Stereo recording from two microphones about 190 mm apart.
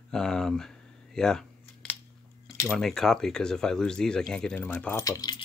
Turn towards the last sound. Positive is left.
turn(degrees=20)  # may be behind; listen again after turning